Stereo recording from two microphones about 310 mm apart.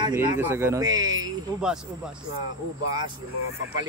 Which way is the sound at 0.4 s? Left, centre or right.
Centre.